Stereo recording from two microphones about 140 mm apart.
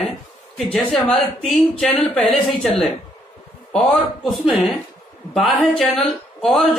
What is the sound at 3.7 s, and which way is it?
Speech, centre (ahead or behind).